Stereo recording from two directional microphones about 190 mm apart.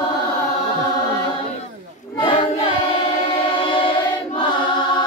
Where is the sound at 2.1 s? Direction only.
25° left (ahead or behind).